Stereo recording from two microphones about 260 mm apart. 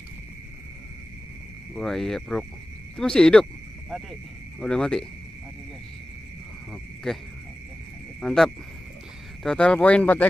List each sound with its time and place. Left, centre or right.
1.8 s speech: centre
7.1 s speech: centre
8.2 s cricket: centre
9.4 s speech: centre